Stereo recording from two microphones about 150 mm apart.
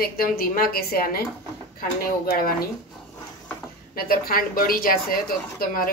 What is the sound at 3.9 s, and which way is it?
Speech, 80° left.